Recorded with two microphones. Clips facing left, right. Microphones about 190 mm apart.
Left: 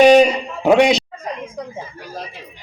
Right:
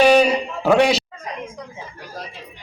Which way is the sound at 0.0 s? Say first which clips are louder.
Left 4 dB; 20° left (ahead or behind).